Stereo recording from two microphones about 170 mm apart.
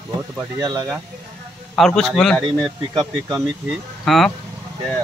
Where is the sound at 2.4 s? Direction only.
30° right (ahead or behind).